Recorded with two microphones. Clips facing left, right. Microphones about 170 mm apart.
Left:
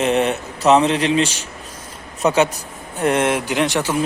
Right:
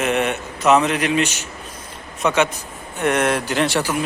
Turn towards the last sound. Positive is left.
turn(degrees=20)  # may be behind; listen again after turning